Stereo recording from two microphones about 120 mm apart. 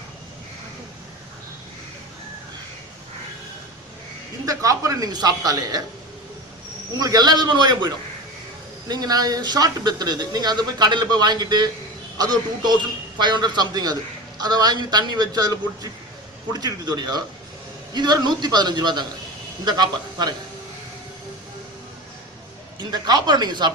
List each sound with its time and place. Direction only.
4.4 s speech: 30° right (ahead or behind)
7.0 s a man's voice: 35° right (ahead or behind)
22.8 s a man's voice: 35° right (ahead or behind)